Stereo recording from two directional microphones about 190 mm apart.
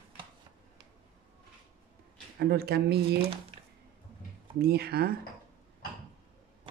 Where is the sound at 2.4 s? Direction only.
60° right (ahead or behind).